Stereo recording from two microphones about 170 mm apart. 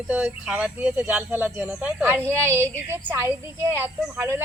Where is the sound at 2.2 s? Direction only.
10° left (ahead or behind).